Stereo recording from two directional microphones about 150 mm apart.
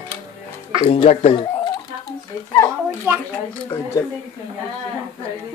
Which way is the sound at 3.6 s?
20° left (ahead or behind).